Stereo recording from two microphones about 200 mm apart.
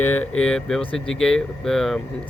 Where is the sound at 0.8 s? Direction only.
25° left (ahead or behind).